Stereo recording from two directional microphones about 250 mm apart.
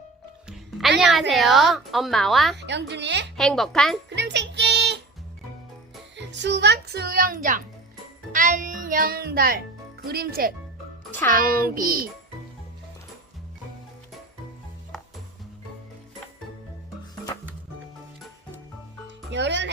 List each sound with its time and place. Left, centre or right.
0.4 s music: centre
1.3 s a woman's voice: centre
2.6 s a woman's voice: right
3.3 s a woman's voice: centre
4.1 s music: right
6.1 s a child's voice: right
19.0 s music: right